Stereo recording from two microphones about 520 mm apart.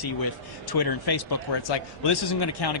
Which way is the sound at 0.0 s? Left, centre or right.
Left.